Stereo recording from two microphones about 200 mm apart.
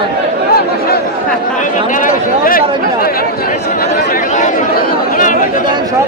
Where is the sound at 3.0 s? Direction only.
50° left (ahead or behind).